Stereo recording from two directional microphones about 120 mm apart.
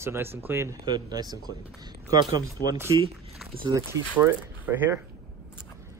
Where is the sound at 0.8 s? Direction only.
35° right (ahead or behind).